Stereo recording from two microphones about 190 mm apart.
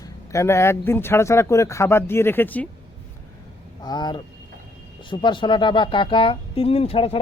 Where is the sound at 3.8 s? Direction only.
20° left (ahead or behind).